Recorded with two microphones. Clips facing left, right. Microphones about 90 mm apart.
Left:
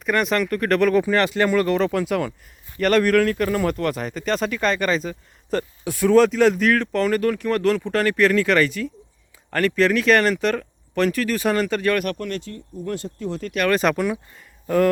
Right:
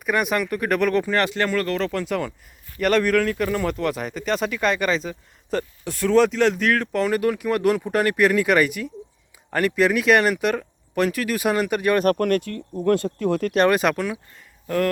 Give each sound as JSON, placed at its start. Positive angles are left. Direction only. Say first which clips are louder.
{"t": 0.0, "sound": "speech", "louder": "left 1 dB", "side_deg": -10}
{"t": 1.5, "sound": "speech", "louder": "left 4 dB", "side_deg": 15}
{"t": 12.1, "sound": "speech", "louder": "right 8 dB", "side_deg": -55}
{"t": 13.7, "sound": "speech", "louder": "left 3 dB", "side_deg": -5}
{"t": 13.9, "sound": "speech", "louder": "left 3 dB", "side_deg": 5}